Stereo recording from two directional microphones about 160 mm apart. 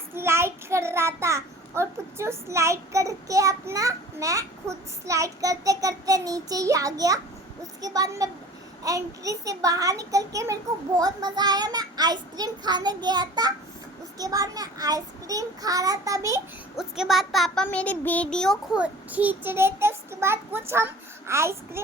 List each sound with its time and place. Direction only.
0.1 s child singing: 15° right (ahead or behind)
5.0 s a child's voice: 20° right (ahead or behind)
16.7 s a child's voice: 5° right (ahead or behind)
18.8 s child singing: 10° right (ahead or behind)